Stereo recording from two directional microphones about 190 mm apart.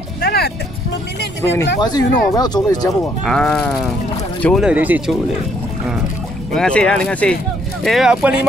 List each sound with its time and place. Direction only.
0.2 s music: 55° left (ahead or behind)
1.8 s speech: 20° left (ahead or behind)
3.3 s speech: 5° left (ahead or behind)
4.6 s speech: 10° right (ahead or behind)
6.5 s speech: 5° left (ahead or behind)